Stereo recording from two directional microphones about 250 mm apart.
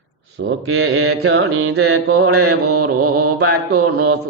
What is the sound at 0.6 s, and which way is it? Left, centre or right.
Mantra, right.